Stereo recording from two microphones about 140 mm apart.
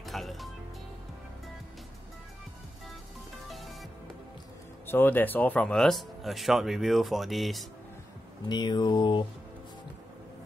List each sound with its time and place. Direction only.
0.0 s music: centre (ahead or behind)
3.4 s music: centre (ahead or behind)
4.8 s speech: 15° left (ahead or behind)
8.5 s mantra: 30° left (ahead or behind)